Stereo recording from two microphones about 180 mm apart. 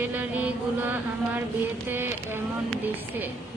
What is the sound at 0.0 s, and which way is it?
Mantra, 10° right (ahead or behind).